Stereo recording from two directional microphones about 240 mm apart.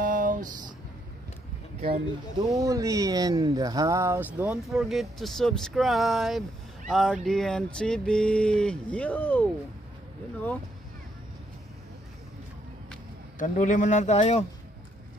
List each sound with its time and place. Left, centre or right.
0.0 s a sound: right
2.3 s speech: centre
13.4 s speech: left